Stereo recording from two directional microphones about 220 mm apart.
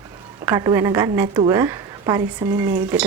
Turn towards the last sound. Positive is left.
turn(degrees=-5)  # may be behind; listen again after turning